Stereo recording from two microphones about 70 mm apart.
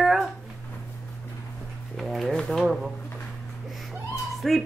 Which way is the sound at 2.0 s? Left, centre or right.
Centre.